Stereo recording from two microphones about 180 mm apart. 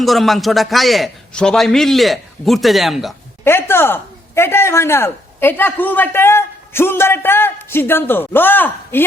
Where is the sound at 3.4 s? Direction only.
15° left (ahead or behind).